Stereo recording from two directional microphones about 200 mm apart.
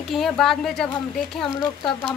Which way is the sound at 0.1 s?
Centre (ahead or behind).